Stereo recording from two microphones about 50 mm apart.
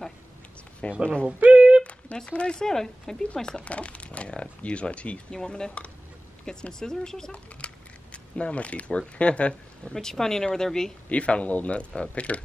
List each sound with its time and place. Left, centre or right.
0.8 s a man's voice: left
1.4 s a sound: right
1.8 s a sound: left
2.1 s speech: centre
7.6 s speech: left
9.9 s speech: centre
11.1 s a man's voice: left